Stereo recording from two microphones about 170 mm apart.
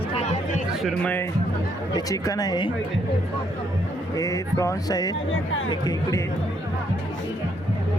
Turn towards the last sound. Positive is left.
turn(degrees=20)  # may be behind; listen again after turning